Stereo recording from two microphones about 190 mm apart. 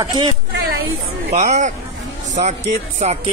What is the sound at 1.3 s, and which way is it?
Speech, 40° right (ahead or behind).